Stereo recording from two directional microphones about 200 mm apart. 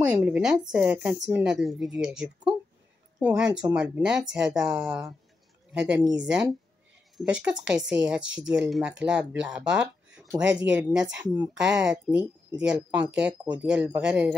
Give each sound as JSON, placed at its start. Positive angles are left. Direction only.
{"t": 0.2, "sound": "speech", "side_deg": -5}
{"t": 7.2, "sound": "speech", "side_deg": -5}